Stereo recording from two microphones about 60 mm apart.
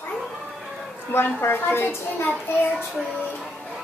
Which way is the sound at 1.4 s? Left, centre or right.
Left.